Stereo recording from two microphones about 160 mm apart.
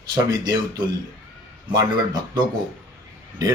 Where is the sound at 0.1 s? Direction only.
25° right (ahead or behind).